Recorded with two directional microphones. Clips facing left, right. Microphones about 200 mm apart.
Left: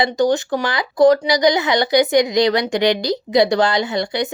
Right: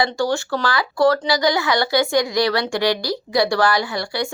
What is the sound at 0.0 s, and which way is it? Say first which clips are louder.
Speech: left 4 dB; 20° left (ahead or behind).